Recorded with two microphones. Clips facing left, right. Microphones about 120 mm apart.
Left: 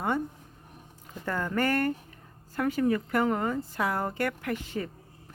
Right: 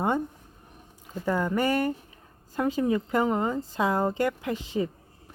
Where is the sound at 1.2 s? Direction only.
15° right (ahead or behind).